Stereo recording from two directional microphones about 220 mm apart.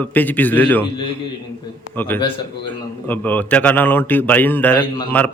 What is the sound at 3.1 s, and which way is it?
Speech, 10° left (ahead or behind).